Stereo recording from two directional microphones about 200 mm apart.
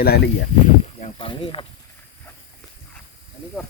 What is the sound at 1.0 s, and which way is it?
Speech, 25° left (ahead or behind).